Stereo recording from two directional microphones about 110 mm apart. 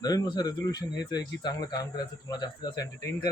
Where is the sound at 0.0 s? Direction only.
35° left (ahead or behind).